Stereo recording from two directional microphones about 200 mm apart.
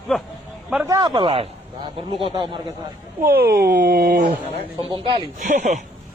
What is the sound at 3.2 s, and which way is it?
Speech, 50° right (ahead or behind).